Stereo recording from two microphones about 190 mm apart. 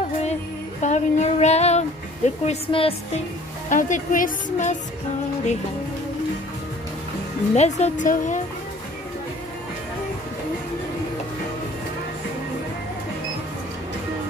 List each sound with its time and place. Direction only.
0.7 s speech: 40° left (ahead or behind)
3.7 s speech: 45° left (ahead or behind)
7.5 s speech: 35° left (ahead or behind)